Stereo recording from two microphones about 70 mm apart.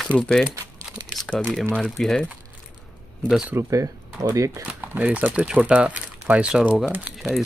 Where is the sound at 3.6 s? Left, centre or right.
Right.